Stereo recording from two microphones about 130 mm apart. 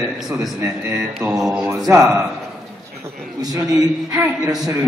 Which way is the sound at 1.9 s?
25° right (ahead or behind).